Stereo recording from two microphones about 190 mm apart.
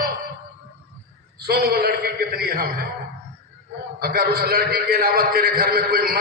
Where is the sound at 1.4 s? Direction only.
55° right (ahead or behind).